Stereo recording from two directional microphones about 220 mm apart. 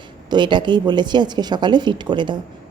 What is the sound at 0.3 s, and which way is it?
A woman's voice, 20° right (ahead or behind).